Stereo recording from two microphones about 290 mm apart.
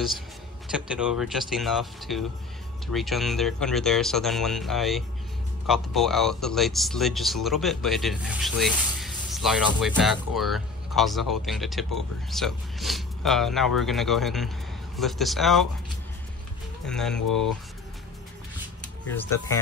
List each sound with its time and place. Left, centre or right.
0.7 s speech: centre
16.8 s speech: centre
17.2 s speech: left
19.0 s speech: centre